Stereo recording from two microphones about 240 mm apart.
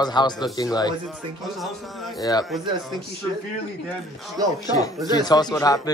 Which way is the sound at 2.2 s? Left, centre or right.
Centre.